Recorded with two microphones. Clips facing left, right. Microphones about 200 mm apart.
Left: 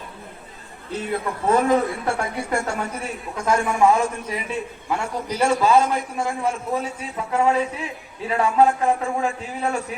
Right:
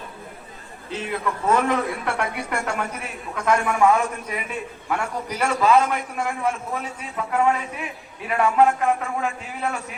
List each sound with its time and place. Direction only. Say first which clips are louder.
0.9 s a man's voice: left 1 dB; 35° left (ahead or behind)